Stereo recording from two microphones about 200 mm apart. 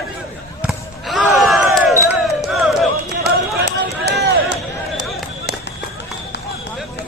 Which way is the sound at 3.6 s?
55° right (ahead or behind).